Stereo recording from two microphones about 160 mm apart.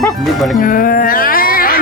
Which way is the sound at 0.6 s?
60° left (ahead or behind).